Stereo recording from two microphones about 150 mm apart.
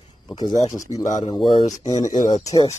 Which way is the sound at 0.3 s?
25° left (ahead or behind).